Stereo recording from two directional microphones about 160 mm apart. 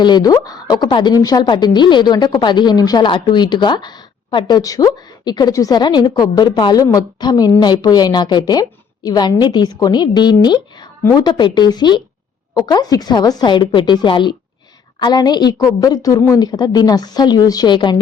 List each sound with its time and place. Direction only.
0.0 s a woman's voice: 25° left (ahead or behind)